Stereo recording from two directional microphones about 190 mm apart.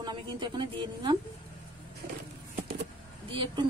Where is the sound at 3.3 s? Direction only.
25° right (ahead or behind).